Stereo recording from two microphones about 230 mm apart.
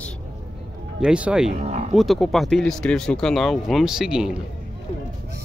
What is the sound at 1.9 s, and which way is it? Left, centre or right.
Speech, centre.